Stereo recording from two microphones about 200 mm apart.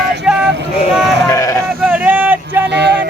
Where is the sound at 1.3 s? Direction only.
15° left (ahead or behind).